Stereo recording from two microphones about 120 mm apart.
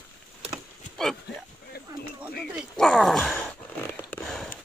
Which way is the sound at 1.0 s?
5° left (ahead or behind).